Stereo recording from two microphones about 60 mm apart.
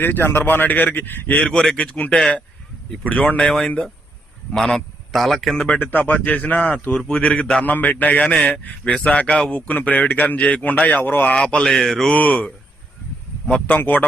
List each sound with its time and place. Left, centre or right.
0.0 s speech: left
1.4 s a man's voice: centre
2.1 s a man's voice: centre
3.0 s a man's voice: left; by 5.5 s centre
5.5 s a man's voice: left
11.3 s a man's voice: centre
11.6 s mantra: centre
12.1 s a man's voice: left
13.5 s a man's voice: left